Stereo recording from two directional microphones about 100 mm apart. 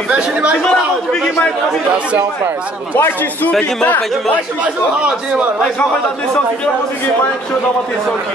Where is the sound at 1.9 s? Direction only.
10° right (ahead or behind).